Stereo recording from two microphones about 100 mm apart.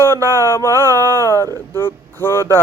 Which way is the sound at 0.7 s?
35° right (ahead or behind).